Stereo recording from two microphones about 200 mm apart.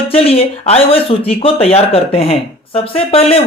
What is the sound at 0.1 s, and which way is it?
Speech, 30° left (ahead or behind).